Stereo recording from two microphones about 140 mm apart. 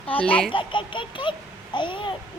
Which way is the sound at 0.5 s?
35° left (ahead or behind).